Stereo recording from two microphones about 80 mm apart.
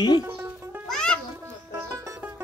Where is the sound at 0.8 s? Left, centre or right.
Centre.